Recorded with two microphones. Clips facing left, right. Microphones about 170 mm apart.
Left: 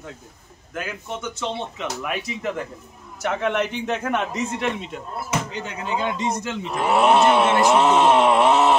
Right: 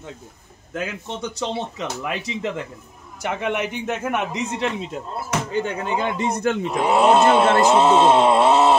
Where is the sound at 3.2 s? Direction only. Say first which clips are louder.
Left 1 dB; 15° right (ahead or behind).